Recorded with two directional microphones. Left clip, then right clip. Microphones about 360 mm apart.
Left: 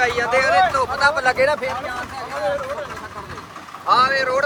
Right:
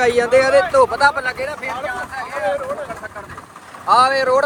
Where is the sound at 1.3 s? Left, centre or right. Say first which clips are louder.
Left 6 dB; left.